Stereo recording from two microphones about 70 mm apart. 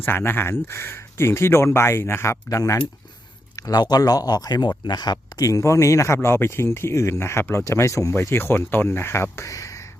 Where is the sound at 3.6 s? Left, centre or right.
Left.